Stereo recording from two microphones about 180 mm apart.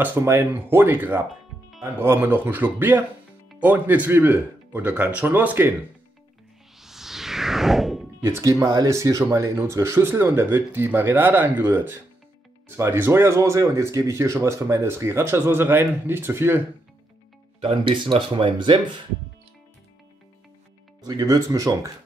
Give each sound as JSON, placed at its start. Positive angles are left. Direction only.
{"t": 0.0, "sound": "speech", "side_deg": -10}
{"t": 6.8, "sound": "a sound", "side_deg": 0}
{"t": 8.2, "sound": "speech", "side_deg": -15}
{"t": 17.6, "sound": "speech", "side_deg": -30}
{"t": 21.0, "sound": "speech", "side_deg": -20}